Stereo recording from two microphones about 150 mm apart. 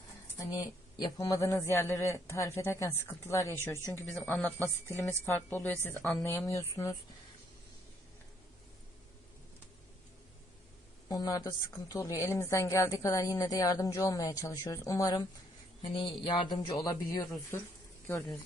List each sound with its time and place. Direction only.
0.3 s a woman's voice: 25° left (ahead or behind)
4.2 s a woman's voice: 5° left (ahead or behind); by 6.9 s 20° left (ahead or behind)
11.1 s a woman's voice: 25° left (ahead or behind)